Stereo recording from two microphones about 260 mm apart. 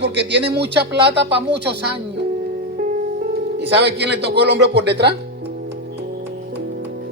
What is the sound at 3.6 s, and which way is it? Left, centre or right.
Speech, right.